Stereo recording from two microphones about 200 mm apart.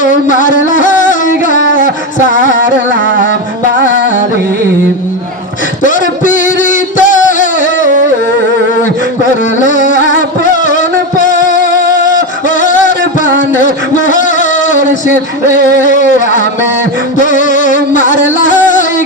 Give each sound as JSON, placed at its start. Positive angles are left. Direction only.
{"t": 0.0, "sound": "music", "side_deg": 40}
{"t": 5.8, "sound": "a sound", "side_deg": 40}
{"t": 9.6, "sound": "carnatic music", "side_deg": 40}
{"t": 10.7, "sound": "music", "side_deg": 40}
{"t": 13.6, "sound": "a sound", "side_deg": 40}
{"t": 17.2, "sound": "music", "side_deg": 40}